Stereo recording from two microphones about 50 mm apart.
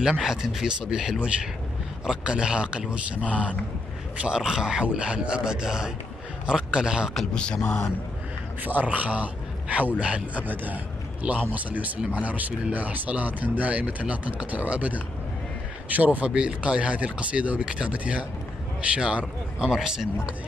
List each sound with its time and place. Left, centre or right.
0.0 s a man's voice: centre
7.3 s speech: centre
8.6 s speech: right
10.4 s speech: right
16.3 s speech: centre